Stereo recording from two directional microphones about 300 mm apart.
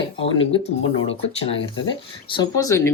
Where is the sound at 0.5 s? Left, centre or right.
Centre.